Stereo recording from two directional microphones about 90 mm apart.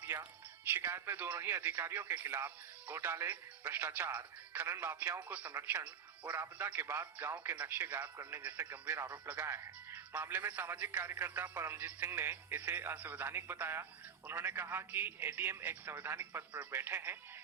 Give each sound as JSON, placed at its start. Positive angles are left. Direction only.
{"t": 0.0, "sound": "music", "side_deg": -25}
{"t": 0.7, "sound": "speech", "side_deg": -30}